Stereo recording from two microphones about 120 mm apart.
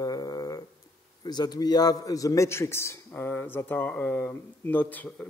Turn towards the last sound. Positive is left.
turn(degrees=15)  # may be behind; listen again after turning